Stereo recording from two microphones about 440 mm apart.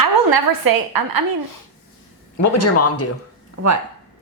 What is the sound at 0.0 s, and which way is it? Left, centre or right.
A woman's voice, right.